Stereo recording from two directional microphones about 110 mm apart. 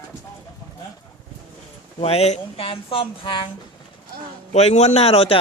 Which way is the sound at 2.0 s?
65° left (ahead or behind).